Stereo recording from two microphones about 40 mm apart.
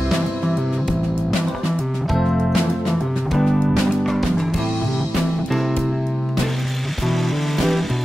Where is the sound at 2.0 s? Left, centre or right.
Centre.